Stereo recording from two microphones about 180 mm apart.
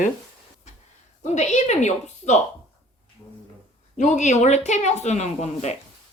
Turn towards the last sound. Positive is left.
turn(degrees=40)  # may be behind; listen again after turning